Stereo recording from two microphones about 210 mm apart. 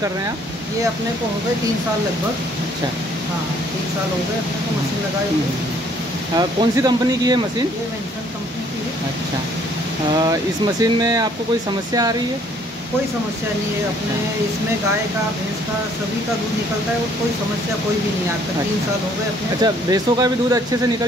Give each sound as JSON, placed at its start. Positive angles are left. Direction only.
{"t": 6.3, "sound": "speech", "side_deg": -20}
{"t": 10.2, "sound": "speech", "side_deg": -15}
{"t": 19.6, "sound": "speech", "side_deg": -15}